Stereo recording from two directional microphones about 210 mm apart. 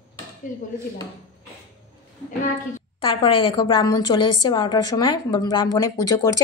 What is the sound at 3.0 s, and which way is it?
A woman's voice, 25° left (ahead or behind).